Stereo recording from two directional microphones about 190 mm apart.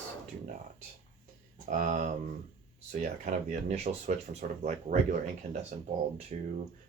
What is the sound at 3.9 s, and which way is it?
Speech, 40° right (ahead or behind).